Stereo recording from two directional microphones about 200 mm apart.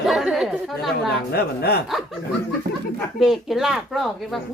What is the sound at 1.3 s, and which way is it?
Speech, 50° left (ahead or behind).